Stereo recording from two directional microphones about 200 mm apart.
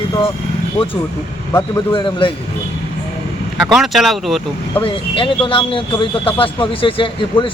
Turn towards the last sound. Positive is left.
turn(degrees=25)  # may be behind; listen again after turning